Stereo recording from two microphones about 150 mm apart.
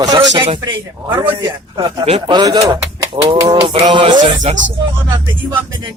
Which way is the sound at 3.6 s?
40° right (ahead or behind).